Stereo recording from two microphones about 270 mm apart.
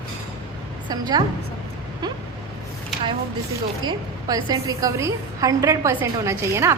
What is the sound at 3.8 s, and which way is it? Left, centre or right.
A woman's voice, centre.